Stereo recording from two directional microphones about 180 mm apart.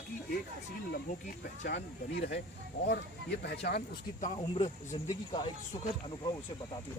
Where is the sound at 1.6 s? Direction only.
65° left (ahead or behind).